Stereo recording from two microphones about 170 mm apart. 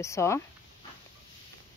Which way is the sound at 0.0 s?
15° left (ahead or behind).